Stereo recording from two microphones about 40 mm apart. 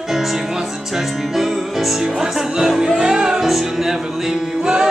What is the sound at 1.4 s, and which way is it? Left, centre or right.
Music, centre.